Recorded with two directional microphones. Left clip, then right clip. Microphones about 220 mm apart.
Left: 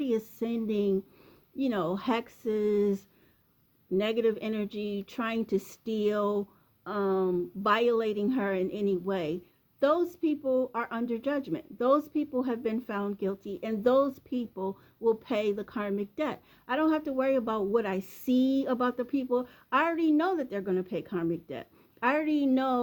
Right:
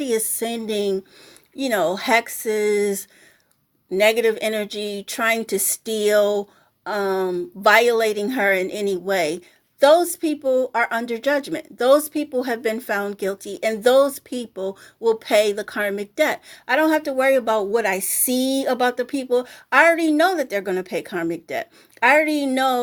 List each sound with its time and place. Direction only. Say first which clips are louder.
0.0 s speech: right 8 dB; centre (ahead or behind)
10.4 s speech: right 10 dB; 30° right (ahead or behind)
10.7 s speech: right 11 dB; 5° right (ahead or behind)